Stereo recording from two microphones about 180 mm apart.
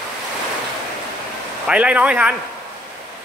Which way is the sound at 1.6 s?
5° right (ahead or behind).